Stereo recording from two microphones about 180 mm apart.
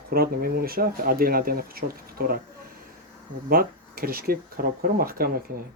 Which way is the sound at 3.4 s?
55° right (ahead or behind).